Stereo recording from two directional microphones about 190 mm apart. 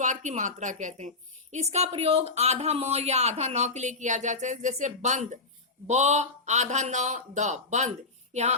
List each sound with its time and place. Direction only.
0.0 s a woman's voice: 40° right (ahead or behind)